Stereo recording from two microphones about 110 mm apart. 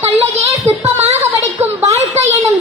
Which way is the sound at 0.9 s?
90° right.